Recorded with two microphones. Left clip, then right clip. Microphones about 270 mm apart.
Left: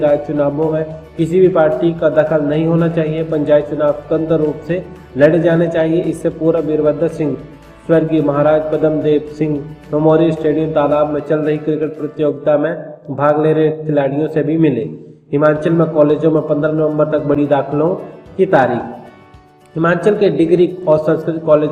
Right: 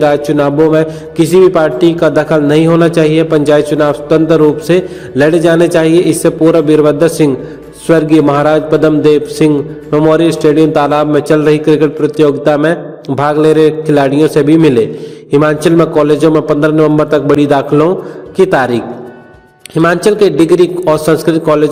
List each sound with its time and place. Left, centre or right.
0.0 s a man's voice: right